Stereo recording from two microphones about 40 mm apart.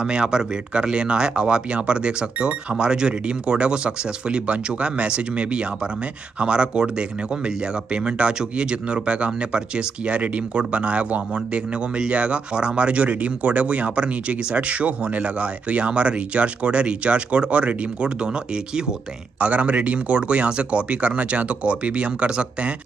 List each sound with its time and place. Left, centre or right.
0.0 s speech: right
19.4 s speech: right